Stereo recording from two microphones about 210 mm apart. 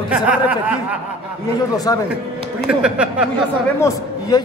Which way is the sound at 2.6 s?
5° right (ahead or behind).